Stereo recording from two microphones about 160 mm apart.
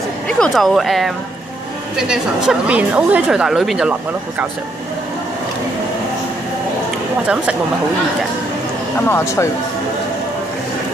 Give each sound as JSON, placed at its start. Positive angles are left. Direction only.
{"t": 0.3, "sound": "a woman's voice", "side_deg": 5}
{"t": 9.0, "sound": "speech", "side_deg": 15}